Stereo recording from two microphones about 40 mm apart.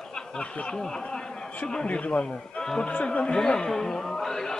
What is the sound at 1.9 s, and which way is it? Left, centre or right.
A man's voice, left.